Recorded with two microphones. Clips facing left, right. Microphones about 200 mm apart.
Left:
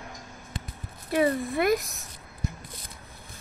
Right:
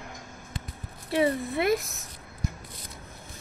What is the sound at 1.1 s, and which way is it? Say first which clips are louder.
Speech: left 1 dB; 25° right (ahead or behind).